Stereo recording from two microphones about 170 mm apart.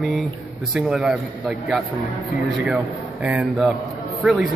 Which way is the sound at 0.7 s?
5° right (ahead or behind).